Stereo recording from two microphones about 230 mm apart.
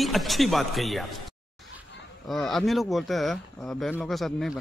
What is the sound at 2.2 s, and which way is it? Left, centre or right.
Speech, centre.